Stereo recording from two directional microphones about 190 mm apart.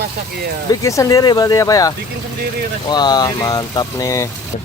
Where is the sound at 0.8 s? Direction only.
15° left (ahead or behind).